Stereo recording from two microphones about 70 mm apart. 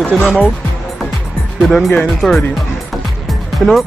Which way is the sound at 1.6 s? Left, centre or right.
Centre.